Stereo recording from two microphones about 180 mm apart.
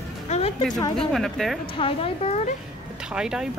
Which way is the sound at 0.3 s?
40° left (ahead or behind).